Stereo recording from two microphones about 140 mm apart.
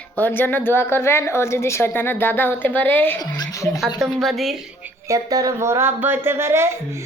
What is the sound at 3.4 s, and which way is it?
Speech, 25° left (ahead or behind).